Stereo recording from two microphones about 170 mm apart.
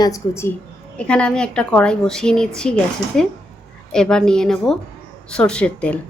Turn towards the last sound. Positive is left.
turn(degrees=5)  # may be behind; listen again after turning